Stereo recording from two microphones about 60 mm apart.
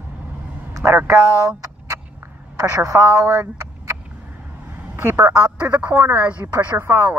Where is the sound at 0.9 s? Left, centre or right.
Right.